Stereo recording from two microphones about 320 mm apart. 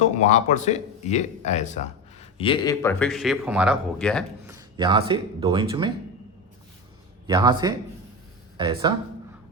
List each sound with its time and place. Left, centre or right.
0.0 s speech: left; by 4.5 s centre
4.5 s speech: centre
7.3 s speech: centre